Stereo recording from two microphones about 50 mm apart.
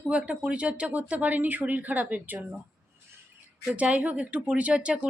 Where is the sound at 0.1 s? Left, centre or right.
Right.